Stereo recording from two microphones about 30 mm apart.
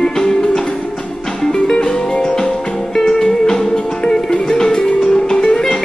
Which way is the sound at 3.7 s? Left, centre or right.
Left.